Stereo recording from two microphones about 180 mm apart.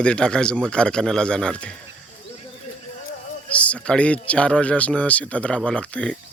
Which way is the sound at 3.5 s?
5° left (ahead or behind).